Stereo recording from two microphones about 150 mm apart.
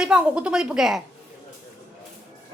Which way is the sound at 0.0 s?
5° right (ahead or behind).